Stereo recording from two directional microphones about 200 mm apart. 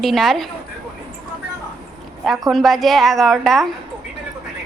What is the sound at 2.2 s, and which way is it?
A woman's voice, centre (ahead or behind).